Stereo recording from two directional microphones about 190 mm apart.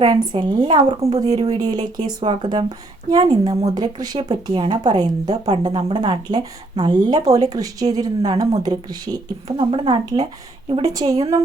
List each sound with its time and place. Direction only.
0.0 s a woman's voice: 20° right (ahead or behind)